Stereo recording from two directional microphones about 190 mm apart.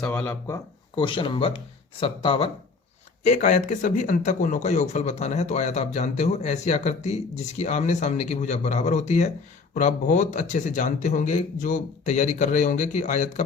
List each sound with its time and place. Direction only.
0.0 s speech: 10° left (ahead or behind); by 2.5 s 30° left (ahead or behind)
3.2 s a man's voice: 40° left (ahead or behind)